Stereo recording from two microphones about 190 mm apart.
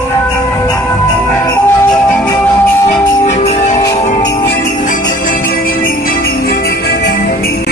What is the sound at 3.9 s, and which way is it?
Jingle bell, 35° left (ahead or behind).